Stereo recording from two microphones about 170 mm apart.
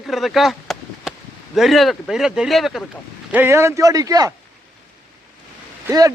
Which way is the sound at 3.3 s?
10° right (ahead or behind).